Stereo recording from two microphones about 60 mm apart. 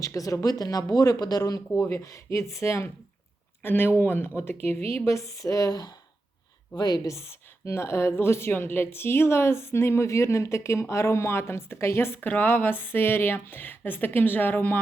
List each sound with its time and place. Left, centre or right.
0.0 s speech: left
0.4 s speech: left
1.9 s a woman's voice: left
3.6 s speech: left
5.0 s speech: left
7.2 s a woman's voice: left